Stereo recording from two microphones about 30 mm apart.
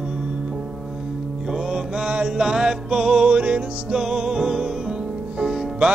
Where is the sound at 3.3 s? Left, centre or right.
Right.